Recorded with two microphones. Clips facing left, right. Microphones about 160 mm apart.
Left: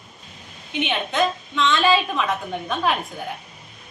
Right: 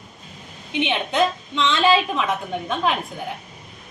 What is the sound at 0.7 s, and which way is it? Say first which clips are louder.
A woman's voice: right 2 dB; 20° right (ahead or behind).